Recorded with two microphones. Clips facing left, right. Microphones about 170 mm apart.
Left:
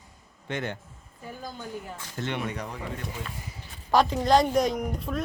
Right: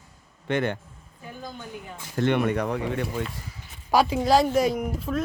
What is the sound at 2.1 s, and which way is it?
Speech, 55° right (ahead or behind).